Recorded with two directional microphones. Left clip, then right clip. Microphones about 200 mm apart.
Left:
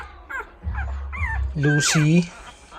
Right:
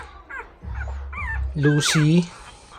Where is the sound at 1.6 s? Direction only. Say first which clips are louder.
Even; 15° right (ahead or behind).